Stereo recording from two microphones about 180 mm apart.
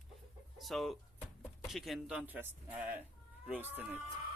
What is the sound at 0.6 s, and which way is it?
Speech, centre (ahead or behind).